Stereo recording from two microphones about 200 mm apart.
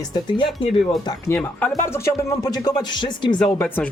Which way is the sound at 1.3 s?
5° left (ahead or behind).